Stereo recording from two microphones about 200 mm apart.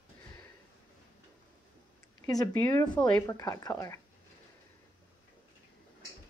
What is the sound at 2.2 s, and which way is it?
Speech, 15° left (ahead or behind).